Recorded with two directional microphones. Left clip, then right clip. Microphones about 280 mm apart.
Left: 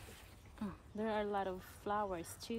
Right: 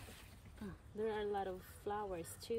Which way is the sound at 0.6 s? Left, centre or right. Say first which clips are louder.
Even; centre.